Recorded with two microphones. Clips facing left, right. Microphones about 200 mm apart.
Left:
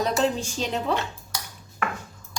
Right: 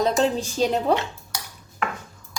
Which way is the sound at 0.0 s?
35° right (ahead or behind).